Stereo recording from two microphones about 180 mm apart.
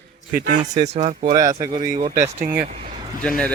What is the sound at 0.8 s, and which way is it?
Speech, 35° right (ahead or behind).